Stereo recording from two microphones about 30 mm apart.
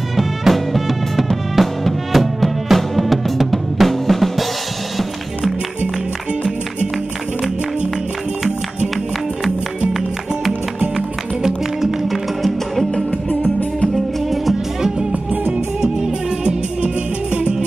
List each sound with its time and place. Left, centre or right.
0.1 s music: centre
11.4 s music: centre
13.9 s music: centre
16.4 s music: right